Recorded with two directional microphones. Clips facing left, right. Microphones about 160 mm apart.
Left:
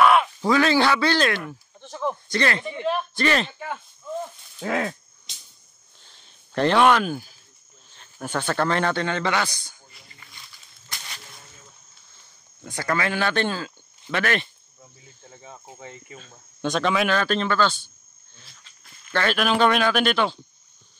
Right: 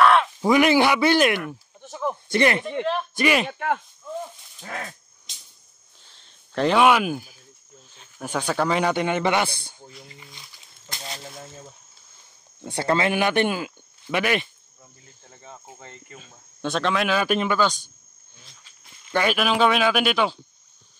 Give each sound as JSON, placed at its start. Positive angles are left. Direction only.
{"t": 0.0, "sound": "a sound", "side_deg": 10}
{"t": 0.4, "sound": "speech", "side_deg": -15}
{"t": 1.8, "sound": "a sound", "side_deg": -5}
{"t": 2.3, "sound": "speech", "side_deg": -20}
{"t": 3.4, "sound": "speech", "side_deg": -70}
{"t": 4.6, "sound": "dog", "side_deg": 90}
{"t": 6.0, "sound": "a sound", "side_deg": 0}
{"t": 7.9, "sound": "a man's voice", "side_deg": -5}
{"t": 10.9, "sound": "a sound", "side_deg": -30}
{"t": 12.6, "sound": "speech", "side_deg": -30}
{"t": 15.2, "sound": "cricket", "side_deg": 0}
{"t": 15.8, "sound": "speech", "side_deg": 5}
{"t": 17.2, "sound": "speech", "side_deg": -10}
{"t": 19.0, "sound": "speech", "side_deg": -10}